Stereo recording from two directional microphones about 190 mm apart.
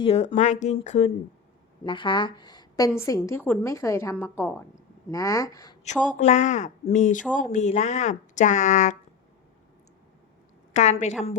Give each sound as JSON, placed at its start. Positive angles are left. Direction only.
{"t": 0.0, "sound": "a woman's voice", "side_deg": 30}
{"t": 5.8, "sound": "speech", "side_deg": 35}
{"t": 10.8, "sound": "speech", "side_deg": 35}